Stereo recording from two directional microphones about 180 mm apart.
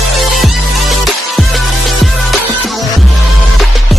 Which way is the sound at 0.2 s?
Centre (ahead or behind).